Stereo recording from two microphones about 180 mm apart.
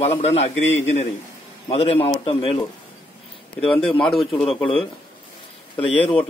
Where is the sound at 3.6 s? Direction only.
5° left (ahead or behind).